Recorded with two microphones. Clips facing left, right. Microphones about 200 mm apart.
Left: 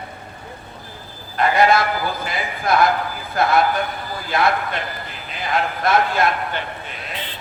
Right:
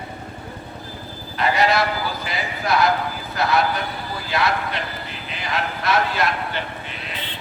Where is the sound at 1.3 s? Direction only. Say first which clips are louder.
Left 3 dB; 50° left (ahead or behind).